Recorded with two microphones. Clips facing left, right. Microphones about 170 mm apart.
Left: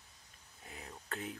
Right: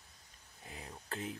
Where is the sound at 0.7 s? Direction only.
25° right (ahead or behind).